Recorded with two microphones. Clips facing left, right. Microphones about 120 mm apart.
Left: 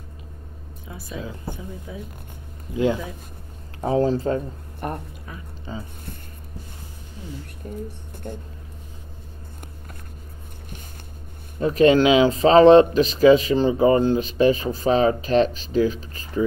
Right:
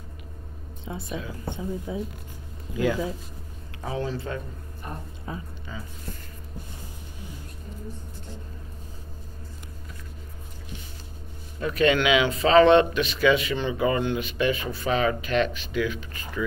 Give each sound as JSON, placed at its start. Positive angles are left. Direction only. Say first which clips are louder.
{"t": 0.8, "sound": "speech", "louder": "even", "side_deg": -25}
{"t": 2.7, "sound": "speech", "louder": "left 4 dB", "side_deg": 25}
{"t": 3.8, "sound": "speech", "louder": "left 10 dB", "side_deg": 35}
{"t": 4.8, "sound": "speech", "louder": "left 9 dB", "side_deg": 60}
{"t": 5.3, "sound": "speech", "louder": "right 6 dB", "side_deg": -25}
{"t": 5.7, "sound": "speech", "louder": "left 6 dB", "side_deg": 30}
{"t": 7.6, "sound": "speech", "louder": "left 7 dB", "side_deg": 55}
{"t": 11.6, "sound": "speech", "louder": "left 6 dB", "side_deg": 35}